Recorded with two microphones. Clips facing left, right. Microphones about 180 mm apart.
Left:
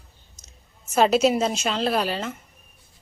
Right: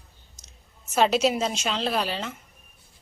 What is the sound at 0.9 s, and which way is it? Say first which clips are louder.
A woman's voice: left 3 dB; 5° left (ahead or behind).